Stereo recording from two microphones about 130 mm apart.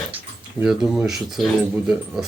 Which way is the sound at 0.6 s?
5° right (ahead or behind).